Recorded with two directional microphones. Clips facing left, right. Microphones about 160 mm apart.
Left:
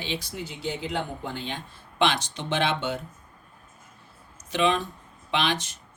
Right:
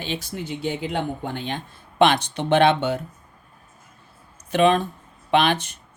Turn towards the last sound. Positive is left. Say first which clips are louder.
# right 7 dB
turn(degrees=-60)  # may be behind; listen again after turning